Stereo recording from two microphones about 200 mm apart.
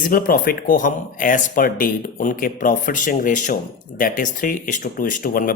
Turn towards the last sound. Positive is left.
turn(degrees=45)  # may be behind; listen again after turning